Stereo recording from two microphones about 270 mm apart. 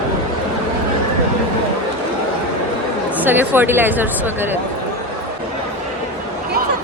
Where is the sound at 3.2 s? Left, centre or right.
Centre.